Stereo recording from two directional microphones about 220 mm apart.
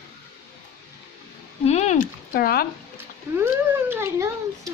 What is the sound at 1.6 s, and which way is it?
Speech, 30° left (ahead or behind).